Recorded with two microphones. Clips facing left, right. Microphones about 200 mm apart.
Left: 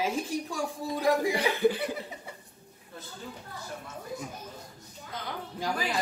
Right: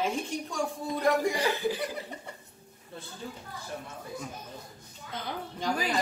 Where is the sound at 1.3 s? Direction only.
60° left (ahead or behind).